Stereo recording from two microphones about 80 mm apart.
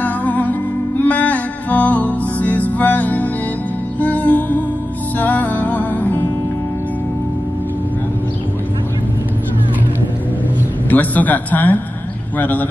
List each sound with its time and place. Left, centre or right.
0.0 s music: left
10.9 s a man's voice: left